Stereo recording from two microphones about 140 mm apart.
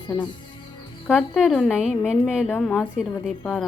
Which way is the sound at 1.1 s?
Centre (ahead or behind).